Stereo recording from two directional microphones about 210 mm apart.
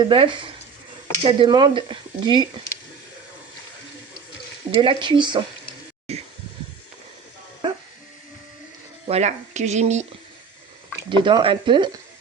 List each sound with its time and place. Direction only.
0.0 s speech: 25° right (ahead or behind)
4.8 s speech: 25° right (ahead or behind)
6.1 s a sound: 30° right (ahead or behind)
9.0 s speech: 30° right (ahead or behind)
11.1 s speech: 20° right (ahead or behind)